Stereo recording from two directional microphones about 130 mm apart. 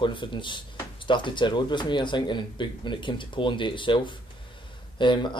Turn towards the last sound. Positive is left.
turn(degrees=35)  # may be behind; listen again after turning